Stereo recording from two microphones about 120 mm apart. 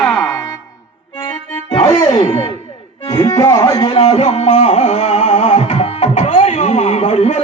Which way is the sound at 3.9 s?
55° left (ahead or behind).